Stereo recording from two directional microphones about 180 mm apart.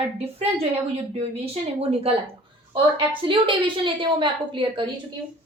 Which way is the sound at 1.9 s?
35° right (ahead or behind).